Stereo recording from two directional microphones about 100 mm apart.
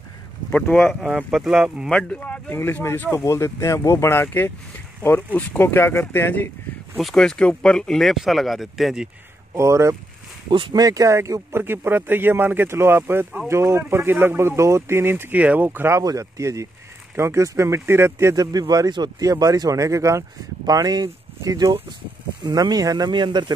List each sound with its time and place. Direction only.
0.5 s speech: 10° left (ahead or behind)
1.3 s speech: 5° right (ahead or behind)
1.9 s speech: 10° left (ahead or behind)
7.0 s speech: 5° left (ahead or behind)
9.5 s speech: 30° right (ahead or behind)
16.0 s speech: 35° right (ahead or behind)
18.3 s speech: 40° right (ahead or behind)